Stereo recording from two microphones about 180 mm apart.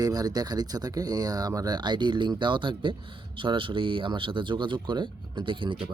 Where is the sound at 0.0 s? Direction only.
20° right (ahead or behind).